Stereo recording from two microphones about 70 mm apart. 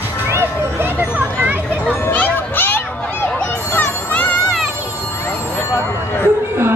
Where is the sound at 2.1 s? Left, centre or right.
Left.